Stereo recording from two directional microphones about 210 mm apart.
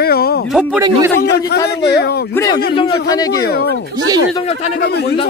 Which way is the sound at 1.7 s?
50° left (ahead or behind).